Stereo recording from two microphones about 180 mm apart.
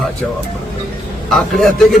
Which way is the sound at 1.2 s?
Centre (ahead or behind).